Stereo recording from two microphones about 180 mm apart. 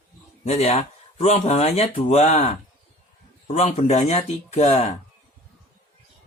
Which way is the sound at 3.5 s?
35° left (ahead or behind).